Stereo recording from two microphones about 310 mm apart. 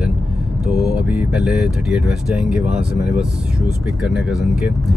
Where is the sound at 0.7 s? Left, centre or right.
Centre.